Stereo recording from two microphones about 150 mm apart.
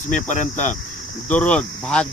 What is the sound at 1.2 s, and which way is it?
Speech, 10° left (ahead or behind).